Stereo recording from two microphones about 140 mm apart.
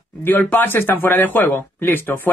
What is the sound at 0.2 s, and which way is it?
Speech, 15° left (ahead or behind).